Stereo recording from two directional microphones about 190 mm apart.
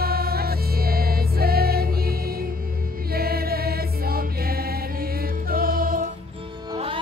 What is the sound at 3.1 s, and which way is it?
Choir, 55° right (ahead or behind).